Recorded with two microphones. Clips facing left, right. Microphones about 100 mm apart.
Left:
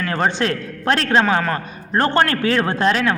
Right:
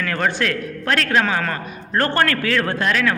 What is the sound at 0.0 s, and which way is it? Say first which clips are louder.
A man's voice: left 2 dB; 25° left (ahead or behind).